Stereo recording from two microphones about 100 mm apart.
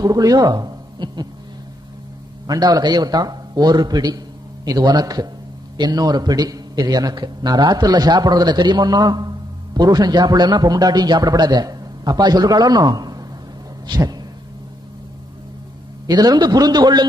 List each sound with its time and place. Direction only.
0.0 s speech: 40° right (ahead or behind)
2.4 s a man's voice: 40° right (ahead or behind)
13.8 s a sound: 40° right (ahead or behind)
16.1 s a man's voice: 40° right (ahead or behind)